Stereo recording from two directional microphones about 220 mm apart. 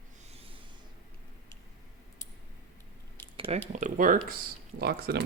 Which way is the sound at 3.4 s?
25° right (ahead or behind).